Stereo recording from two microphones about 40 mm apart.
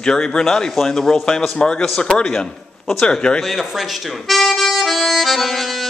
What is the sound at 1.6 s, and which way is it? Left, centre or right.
Mantra, left.